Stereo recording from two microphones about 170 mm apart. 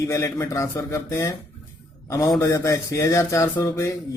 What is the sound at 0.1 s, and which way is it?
A man's voice, 20° left (ahead or behind).